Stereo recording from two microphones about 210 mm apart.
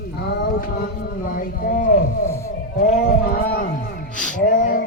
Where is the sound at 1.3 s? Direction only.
40° left (ahead or behind).